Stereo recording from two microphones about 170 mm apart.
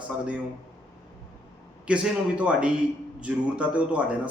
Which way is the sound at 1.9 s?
5° right (ahead or behind).